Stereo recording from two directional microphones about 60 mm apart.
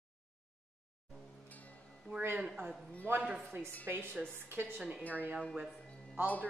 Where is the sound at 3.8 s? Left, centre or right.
Right.